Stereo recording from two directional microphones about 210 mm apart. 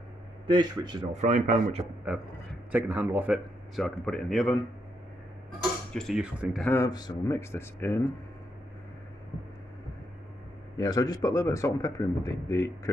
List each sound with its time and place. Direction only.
0.5 s speech: 20° right (ahead or behind)
1.1 s speech: 35° right (ahead or behind)
2.7 s speech: 10° right (ahead or behind)
5.9 s speech: centre (ahead or behind)
6.6 s speech: 10° left (ahead or behind)
10.8 s speech: 15° left (ahead or behind)